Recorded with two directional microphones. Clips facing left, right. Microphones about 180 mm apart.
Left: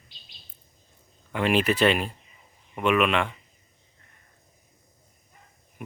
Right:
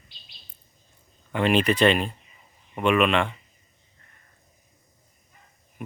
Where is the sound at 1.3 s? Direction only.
5° left (ahead or behind).